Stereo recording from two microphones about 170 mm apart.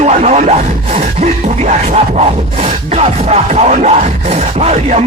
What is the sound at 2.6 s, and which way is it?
Music, 40° right (ahead or behind).